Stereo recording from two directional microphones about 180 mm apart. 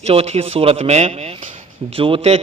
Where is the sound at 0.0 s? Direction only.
35° right (ahead or behind).